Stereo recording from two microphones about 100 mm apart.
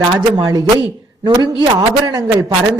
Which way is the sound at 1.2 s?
45° right (ahead or behind).